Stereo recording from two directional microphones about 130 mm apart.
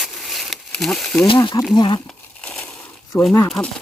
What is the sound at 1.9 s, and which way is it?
Crumpling, 10° left (ahead or behind).